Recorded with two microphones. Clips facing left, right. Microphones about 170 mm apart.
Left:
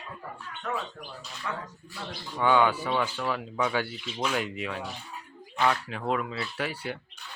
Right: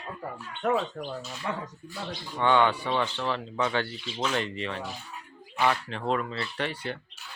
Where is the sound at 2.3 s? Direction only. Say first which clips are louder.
Even; 5° left (ahead or behind).